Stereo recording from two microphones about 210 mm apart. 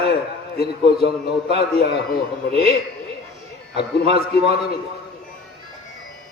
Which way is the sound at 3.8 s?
50° left (ahead or behind).